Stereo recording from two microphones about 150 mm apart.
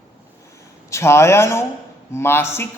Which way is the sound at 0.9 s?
20° left (ahead or behind).